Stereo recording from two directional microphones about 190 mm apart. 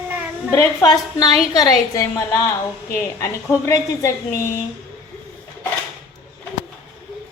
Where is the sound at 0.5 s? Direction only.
15° left (ahead or behind).